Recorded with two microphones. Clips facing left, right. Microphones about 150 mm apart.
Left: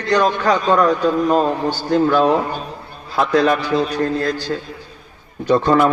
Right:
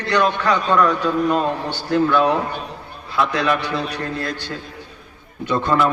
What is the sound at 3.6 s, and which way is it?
Speech, 65° right (ahead or behind).